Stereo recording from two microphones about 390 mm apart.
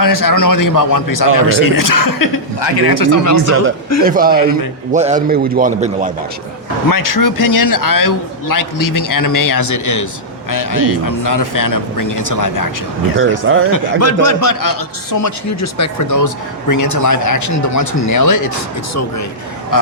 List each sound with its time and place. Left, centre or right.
0.0 s speech: left
4.0 s a man's voice: right
6.9 s speech: left
13.1 s speech: right
14.0 s speech: left
19.7 s speech: left